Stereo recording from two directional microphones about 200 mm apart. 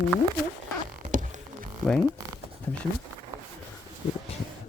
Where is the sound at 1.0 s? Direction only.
40° right (ahead or behind).